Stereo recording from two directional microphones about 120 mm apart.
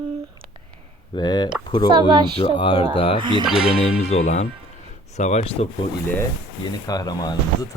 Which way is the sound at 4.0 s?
60° left (ahead or behind).